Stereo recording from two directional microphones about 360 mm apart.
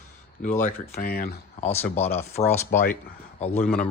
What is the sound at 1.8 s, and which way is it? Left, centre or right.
Speech, centre.